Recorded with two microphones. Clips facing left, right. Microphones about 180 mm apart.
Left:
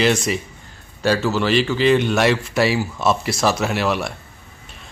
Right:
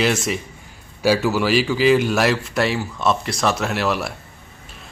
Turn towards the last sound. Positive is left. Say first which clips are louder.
# left 1 dB
turn(degrees=0)  # may be behind; listen again after turning